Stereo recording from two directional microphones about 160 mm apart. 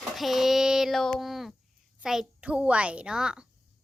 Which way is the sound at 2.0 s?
5° right (ahead or behind).